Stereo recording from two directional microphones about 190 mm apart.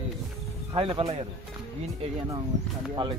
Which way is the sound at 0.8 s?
30° right (ahead or behind).